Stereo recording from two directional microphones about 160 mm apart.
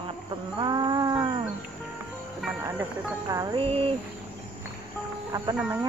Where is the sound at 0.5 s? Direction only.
25° right (ahead or behind).